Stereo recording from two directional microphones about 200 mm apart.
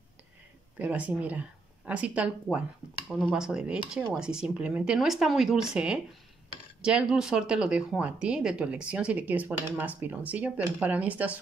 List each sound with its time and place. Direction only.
0.7 s speech: 5° right (ahead or behind)